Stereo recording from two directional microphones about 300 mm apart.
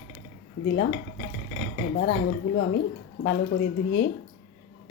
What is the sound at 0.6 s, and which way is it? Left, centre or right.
Speech, left.